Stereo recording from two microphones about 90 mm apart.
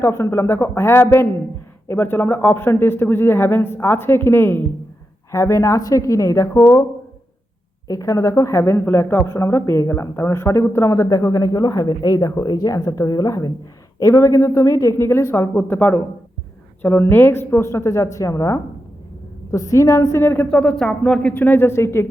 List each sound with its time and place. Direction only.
0.0 s a man's voice: 30° left (ahead or behind)
5.3 s speech: 35° left (ahead or behind)
7.9 s speech: 40° left (ahead or behind); by 20.6 s 20° left (ahead or behind)
20.6 s speech: 5° left (ahead or behind)
21.3 s a man's voice: 20° left (ahead or behind)